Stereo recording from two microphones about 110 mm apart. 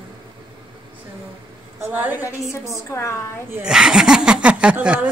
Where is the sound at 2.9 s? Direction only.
25° left (ahead or behind).